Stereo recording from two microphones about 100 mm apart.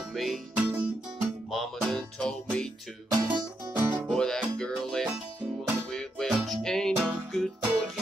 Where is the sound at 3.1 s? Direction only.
45° right (ahead or behind).